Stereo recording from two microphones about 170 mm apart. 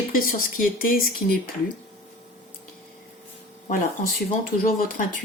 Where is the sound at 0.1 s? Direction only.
55° left (ahead or behind).